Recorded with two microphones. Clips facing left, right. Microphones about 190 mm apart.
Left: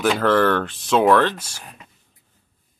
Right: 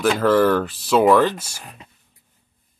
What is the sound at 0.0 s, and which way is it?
Speech, centre (ahead or behind).